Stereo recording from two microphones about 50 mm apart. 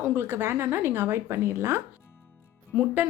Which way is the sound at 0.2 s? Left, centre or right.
Right.